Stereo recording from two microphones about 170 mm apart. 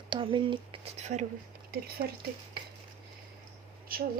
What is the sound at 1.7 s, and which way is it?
Speech, 60° right (ahead or behind).